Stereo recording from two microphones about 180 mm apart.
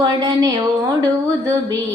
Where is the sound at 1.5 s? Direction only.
15° right (ahead or behind).